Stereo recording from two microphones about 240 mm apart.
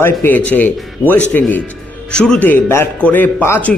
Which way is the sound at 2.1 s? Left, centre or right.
Centre.